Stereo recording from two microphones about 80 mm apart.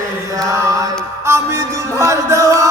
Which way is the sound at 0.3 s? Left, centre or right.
Right.